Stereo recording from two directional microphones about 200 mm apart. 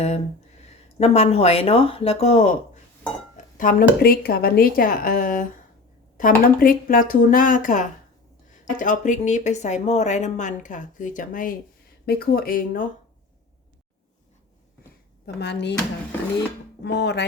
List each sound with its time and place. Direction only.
0.9 s speech: 35° left (ahead or behind)
3.6 s speech: 45° left (ahead or behind)
15.4 s speech: 60° left (ahead or behind)
16.8 s speech: 55° left (ahead or behind)